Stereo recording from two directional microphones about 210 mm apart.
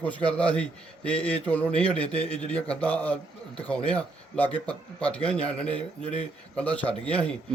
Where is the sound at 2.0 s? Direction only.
30° left (ahead or behind).